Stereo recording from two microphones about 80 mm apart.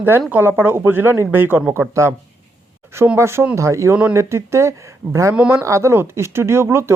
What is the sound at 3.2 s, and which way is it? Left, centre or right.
Speech, right.